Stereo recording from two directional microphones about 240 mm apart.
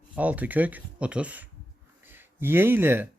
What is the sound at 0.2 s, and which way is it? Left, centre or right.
Speech, centre.